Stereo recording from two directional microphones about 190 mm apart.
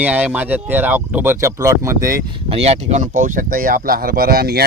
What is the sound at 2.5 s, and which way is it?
Speech, 35° right (ahead or behind).